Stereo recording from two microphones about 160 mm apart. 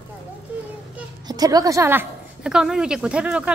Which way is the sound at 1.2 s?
25° right (ahead or behind).